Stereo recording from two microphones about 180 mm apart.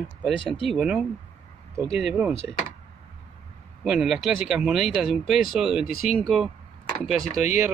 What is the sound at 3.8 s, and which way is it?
Speech, 5° right (ahead or behind).